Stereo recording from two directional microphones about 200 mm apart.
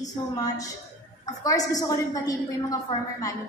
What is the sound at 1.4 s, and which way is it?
Speech, 20° left (ahead or behind).